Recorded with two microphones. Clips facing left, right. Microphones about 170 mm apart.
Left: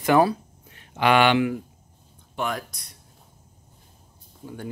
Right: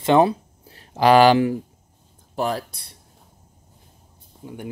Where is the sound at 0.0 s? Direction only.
25° right (ahead or behind).